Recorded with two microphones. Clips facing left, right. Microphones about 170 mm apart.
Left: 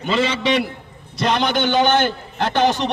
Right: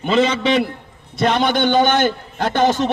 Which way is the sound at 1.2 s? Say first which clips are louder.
Right 2 dB; 50° right (ahead or behind).